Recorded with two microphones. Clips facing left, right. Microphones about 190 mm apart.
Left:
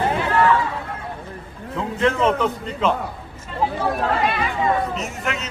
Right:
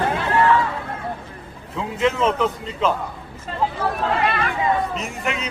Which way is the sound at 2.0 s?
Centre (ahead or behind).